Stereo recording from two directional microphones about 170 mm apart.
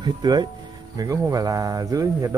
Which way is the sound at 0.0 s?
25° right (ahead or behind).